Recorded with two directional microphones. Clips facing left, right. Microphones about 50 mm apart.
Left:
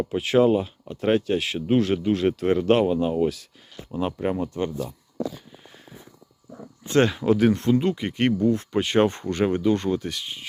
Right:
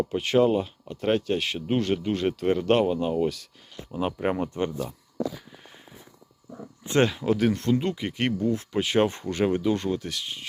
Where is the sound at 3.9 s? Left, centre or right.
Centre.